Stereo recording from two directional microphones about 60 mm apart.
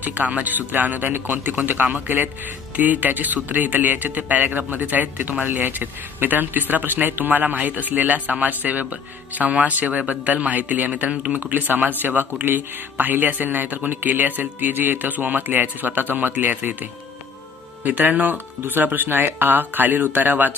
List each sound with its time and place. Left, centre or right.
0.0 s speech: right